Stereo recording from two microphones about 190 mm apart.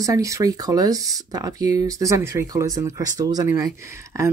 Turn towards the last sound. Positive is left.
turn(degrees=-15)  # may be behind; listen again after turning